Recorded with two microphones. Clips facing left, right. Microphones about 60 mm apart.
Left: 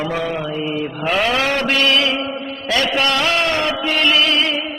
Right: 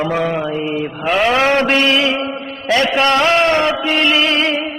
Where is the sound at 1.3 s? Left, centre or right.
Right.